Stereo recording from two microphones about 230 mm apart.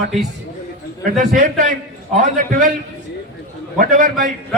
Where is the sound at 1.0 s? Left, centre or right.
Right.